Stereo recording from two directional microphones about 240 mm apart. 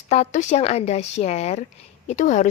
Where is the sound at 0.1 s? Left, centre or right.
Left.